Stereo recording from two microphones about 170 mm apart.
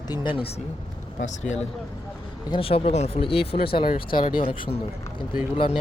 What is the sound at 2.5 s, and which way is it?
Speech, 35° left (ahead or behind).